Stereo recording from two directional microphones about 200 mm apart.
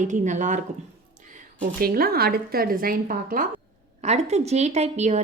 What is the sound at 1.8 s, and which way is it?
A woman's voice, 45° right (ahead or behind).